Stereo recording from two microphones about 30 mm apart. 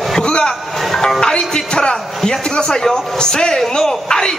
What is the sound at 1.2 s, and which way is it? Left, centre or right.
A man's voice, left.